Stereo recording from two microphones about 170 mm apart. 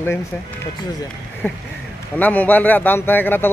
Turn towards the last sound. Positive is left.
turn(degrees=10)  # may be behind; listen again after turning